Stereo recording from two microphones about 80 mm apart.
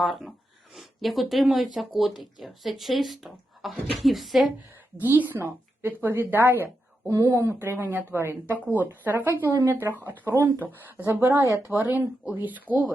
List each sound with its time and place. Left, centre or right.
0.0 s speech: centre
4.9 s a woman's voice: right
7.1 s speech: right
7.6 s a woman's voice: right